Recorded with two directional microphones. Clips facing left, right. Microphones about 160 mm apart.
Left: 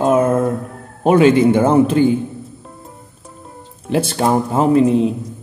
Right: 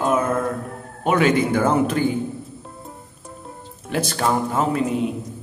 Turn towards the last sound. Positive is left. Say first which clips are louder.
# left 8 dB
turn(degrees=30)  # may be behind; listen again after turning